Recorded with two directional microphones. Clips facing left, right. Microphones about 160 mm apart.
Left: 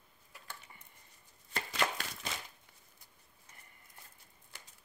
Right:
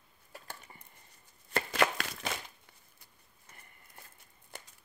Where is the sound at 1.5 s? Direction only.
60° right (ahead or behind).